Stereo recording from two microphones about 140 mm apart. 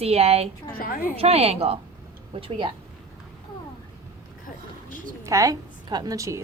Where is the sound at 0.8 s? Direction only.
90° left.